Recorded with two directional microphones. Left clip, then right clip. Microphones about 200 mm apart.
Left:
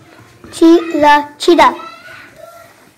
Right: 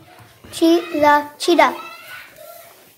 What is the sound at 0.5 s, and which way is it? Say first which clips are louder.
A child's voice: left 7 dB; 20° left (ahead or behind).